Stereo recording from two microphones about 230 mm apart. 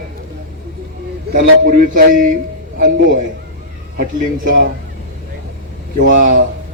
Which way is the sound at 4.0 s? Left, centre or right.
Right.